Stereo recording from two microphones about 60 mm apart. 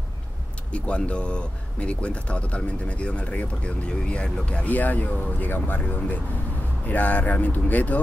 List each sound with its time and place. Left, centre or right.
0.7 s speech: centre